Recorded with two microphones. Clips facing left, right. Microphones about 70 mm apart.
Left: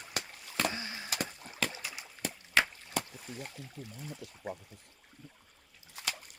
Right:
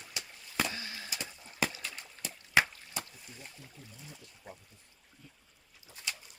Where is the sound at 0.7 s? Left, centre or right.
Left.